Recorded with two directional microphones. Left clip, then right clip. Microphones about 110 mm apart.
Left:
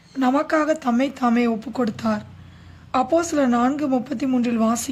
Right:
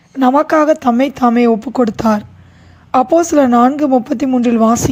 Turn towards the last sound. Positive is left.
turn(degrees=-45)  # may be behind; listen again after turning